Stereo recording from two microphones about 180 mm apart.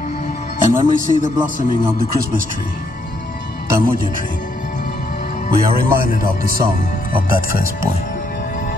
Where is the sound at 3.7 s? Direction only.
55° right (ahead or behind).